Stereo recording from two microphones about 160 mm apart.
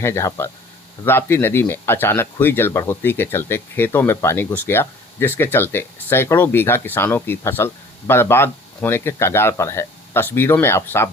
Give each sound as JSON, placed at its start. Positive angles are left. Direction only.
{"t": 0.0, "sound": "speech", "side_deg": 15}